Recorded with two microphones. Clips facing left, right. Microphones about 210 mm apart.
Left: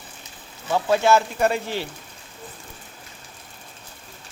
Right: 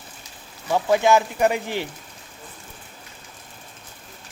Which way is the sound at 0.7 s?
15° right (ahead or behind).